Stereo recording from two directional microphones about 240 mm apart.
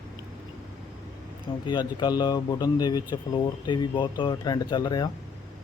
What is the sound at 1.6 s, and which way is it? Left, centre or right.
Speech, centre.